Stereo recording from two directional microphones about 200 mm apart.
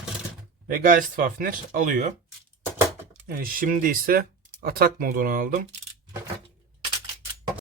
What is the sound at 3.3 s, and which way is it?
Speech, 45° right (ahead or behind).